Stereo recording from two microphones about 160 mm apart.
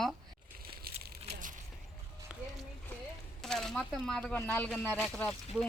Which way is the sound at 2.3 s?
5° right (ahead or behind).